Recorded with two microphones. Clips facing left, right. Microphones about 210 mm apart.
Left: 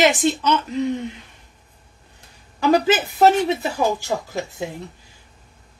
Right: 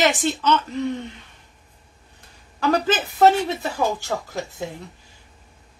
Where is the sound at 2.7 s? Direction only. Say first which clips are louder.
Left 4 dB; 10° left (ahead or behind).